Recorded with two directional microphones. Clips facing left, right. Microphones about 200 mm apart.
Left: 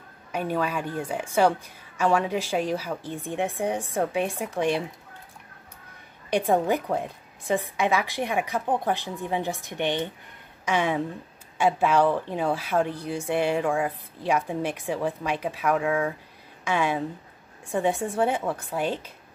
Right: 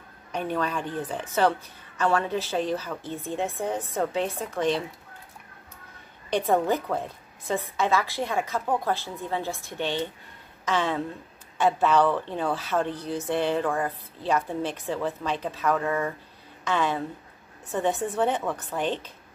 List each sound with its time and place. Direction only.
0.3 s a woman's voice: 10° left (ahead or behind)
6.3 s a woman's voice: 15° left (ahead or behind)